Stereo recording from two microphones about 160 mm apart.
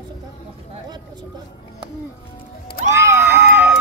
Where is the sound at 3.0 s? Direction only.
15° right (ahead or behind).